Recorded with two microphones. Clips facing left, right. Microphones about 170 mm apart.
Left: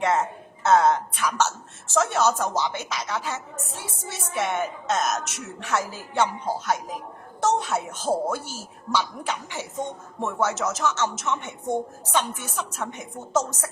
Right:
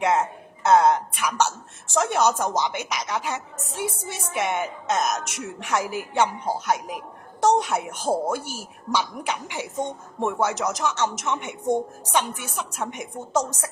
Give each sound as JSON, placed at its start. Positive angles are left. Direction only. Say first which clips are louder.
{"t": 0.0, "sound": "speech", "louder": "right 1 dB", "side_deg": -15}